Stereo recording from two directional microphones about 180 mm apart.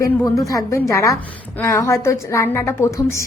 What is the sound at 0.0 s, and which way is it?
Speech, 20° left (ahead or behind).